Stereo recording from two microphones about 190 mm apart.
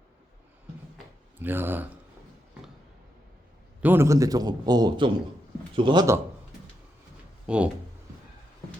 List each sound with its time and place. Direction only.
1.4 s speech: 10° right (ahead or behind)
3.8 s a man's voice: 10° right (ahead or behind)
7.4 s speech: 5° right (ahead or behind)